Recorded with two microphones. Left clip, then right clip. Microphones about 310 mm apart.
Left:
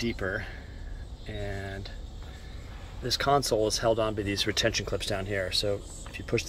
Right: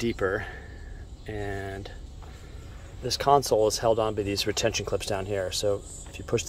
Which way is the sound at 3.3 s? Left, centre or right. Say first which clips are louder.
Right 4 dB; right.